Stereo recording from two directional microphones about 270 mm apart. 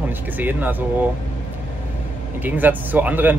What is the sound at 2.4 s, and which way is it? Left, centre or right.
Speech, centre.